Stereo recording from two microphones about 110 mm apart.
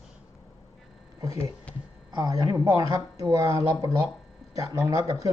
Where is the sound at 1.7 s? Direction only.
10° left (ahead or behind).